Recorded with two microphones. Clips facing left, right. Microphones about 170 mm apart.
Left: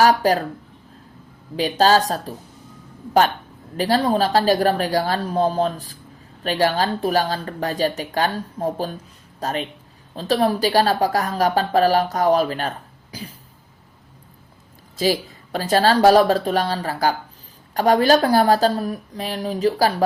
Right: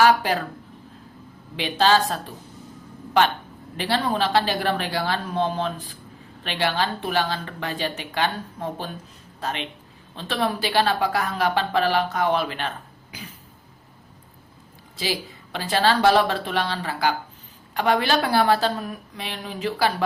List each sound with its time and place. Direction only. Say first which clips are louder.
0.0 s speech: left 3 dB; 40° left (ahead or behind)
1.8 s speech: left 3 dB; 40° left (ahead or behind)
3.8 s speech: left 5 dB; 40° left (ahead or behind)
14.9 s speech: left 8 dB; 45° left (ahead or behind)